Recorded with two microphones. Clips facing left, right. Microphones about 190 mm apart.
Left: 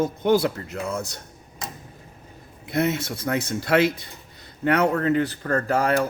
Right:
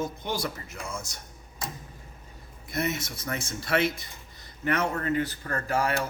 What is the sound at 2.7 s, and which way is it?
Speech, 60° left (ahead or behind).